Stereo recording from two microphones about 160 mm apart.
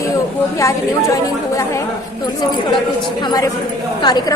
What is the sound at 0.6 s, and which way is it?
A woman's voice, 20° left (ahead or behind).